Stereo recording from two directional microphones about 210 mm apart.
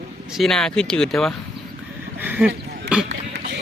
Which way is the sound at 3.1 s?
55° right (ahead or behind).